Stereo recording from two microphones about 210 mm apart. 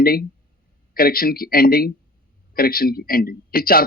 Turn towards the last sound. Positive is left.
turn(degrees=45)  # may be behind; listen again after turning